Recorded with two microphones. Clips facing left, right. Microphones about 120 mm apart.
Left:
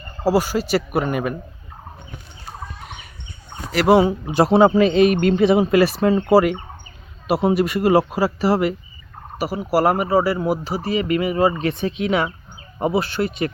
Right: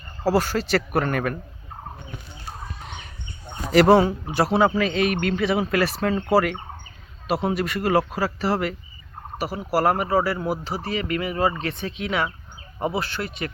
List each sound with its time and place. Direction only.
0.3 s speech: 10° left (ahead or behind)
2.8 s a sound: 5° left (ahead or behind)
3.8 s speech: 15° left (ahead or behind)